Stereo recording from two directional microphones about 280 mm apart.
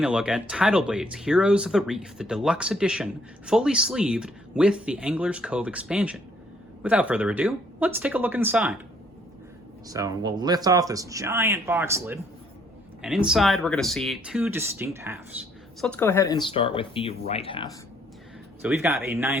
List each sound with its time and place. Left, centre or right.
0.0 s speech: centre
9.9 s speech: centre
15.8 s speech: centre
18.6 s speech: centre